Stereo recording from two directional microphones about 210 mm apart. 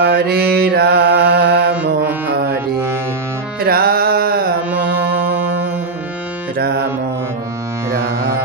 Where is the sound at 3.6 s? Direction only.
45° right (ahead or behind).